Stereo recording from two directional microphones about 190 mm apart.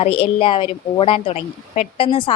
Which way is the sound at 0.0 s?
30° left (ahead or behind).